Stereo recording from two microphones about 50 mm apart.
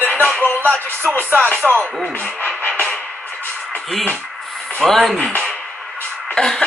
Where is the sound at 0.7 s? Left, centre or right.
Right.